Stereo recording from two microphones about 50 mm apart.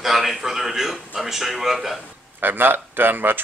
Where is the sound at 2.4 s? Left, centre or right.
Right.